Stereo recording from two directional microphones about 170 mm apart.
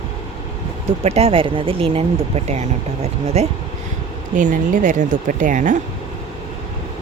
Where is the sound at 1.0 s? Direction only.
35° right (ahead or behind).